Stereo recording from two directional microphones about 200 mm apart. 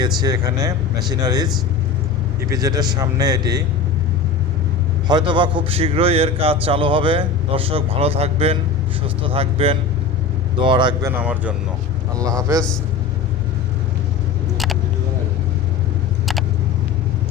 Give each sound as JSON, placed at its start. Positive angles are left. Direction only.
{"t": 0.0, "sound": "a man's voice", "side_deg": -20}
{"t": 2.5, "sound": "a man's voice", "side_deg": -20}
{"t": 5.0, "sound": "a man's voice", "side_deg": -20}
{"t": 11.2, "sound": "speech", "side_deg": -5}